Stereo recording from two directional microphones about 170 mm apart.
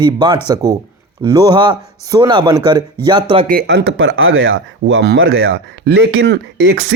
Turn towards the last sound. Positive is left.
turn(degrees=-90)